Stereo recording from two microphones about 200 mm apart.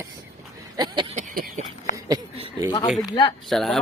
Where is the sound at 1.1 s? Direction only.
40° right (ahead or behind).